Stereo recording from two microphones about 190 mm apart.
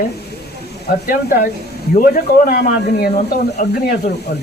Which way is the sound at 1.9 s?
50° left (ahead or behind).